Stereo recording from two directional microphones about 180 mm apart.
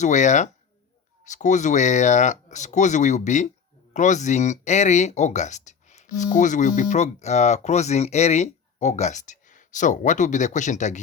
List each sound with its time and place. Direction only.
0.0 s speech: 40° left (ahead or behind)